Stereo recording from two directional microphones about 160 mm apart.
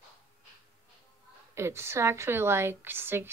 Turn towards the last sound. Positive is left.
turn(degrees=-15)  # may be behind; listen again after turning